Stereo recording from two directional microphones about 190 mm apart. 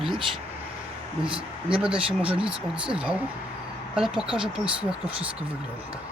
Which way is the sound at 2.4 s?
5° right (ahead or behind).